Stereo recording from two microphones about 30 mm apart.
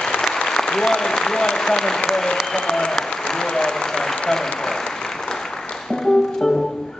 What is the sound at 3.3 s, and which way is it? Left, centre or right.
Speech, left.